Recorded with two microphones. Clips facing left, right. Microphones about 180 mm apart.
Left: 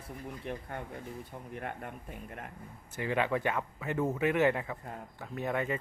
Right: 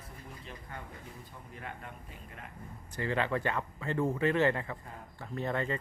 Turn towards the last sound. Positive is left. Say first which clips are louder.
# left 1 dB
turn(degrees=10)  # may be behind; listen again after turning